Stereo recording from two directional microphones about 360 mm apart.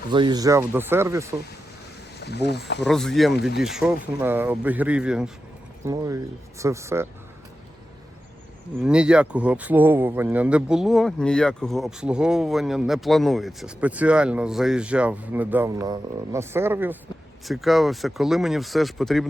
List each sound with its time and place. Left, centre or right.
0.1 s speech: centre
2.1 s speech: left
2.8 s speech: centre
8.8 s speech: centre